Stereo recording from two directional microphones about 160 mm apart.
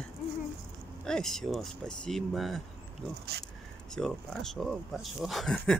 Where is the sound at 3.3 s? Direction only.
90° right.